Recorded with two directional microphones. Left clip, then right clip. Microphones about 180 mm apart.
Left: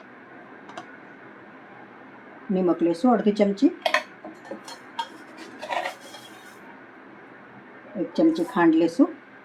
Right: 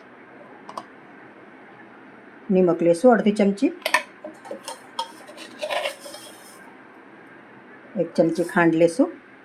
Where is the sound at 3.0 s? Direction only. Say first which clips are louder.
Right 4 dB; 45° right (ahead or behind).